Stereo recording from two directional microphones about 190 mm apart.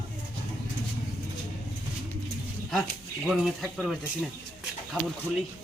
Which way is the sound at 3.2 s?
Centre (ahead or behind).